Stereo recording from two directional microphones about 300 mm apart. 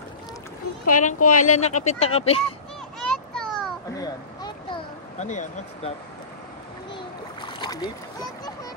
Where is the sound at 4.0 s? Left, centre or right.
Centre.